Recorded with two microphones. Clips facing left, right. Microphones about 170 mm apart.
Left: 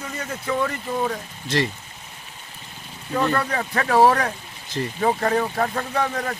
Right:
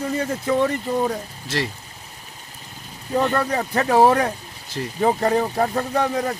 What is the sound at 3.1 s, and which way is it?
Speech, 25° right (ahead or behind).